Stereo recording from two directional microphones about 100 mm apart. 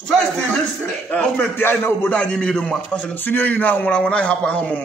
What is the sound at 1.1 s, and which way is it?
A man's voice, 15° left (ahead or behind).